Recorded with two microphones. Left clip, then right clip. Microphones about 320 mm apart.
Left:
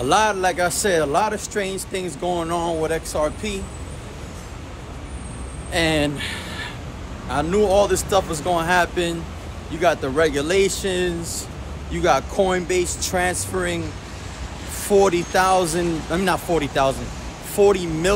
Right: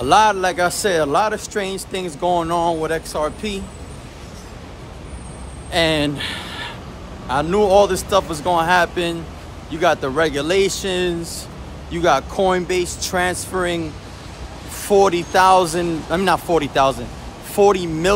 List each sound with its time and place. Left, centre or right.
0.0 s speech: centre
5.7 s speech: centre